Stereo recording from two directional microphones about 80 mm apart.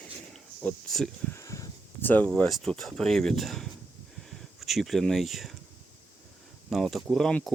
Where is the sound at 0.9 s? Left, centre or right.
Centre.